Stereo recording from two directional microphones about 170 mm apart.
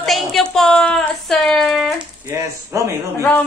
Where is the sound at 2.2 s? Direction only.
15° right (ahead or behind).